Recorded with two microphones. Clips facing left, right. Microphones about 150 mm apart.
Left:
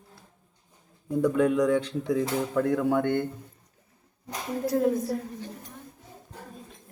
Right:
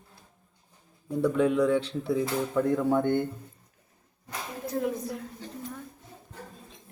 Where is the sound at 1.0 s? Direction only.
10° left (ahead or behind).